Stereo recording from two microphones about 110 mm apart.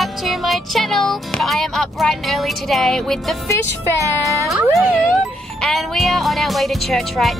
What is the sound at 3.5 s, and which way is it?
Speech, 25° left (ahead or behind).